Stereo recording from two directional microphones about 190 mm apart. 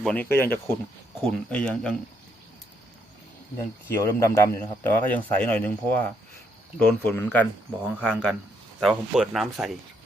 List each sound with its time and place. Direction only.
0.0 s a man's voice: 5° left (ahead or behind)
3.8 s a man's voice: 15° left (ahead or behind)
7.9 s speech: 10° right (ahead or behind)